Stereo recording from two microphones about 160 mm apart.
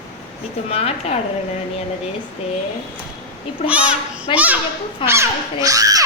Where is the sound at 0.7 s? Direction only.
40° left (ahead or behind).